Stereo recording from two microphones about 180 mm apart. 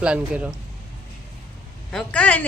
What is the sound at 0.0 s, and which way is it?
Speech, 5° right (ahead or behind).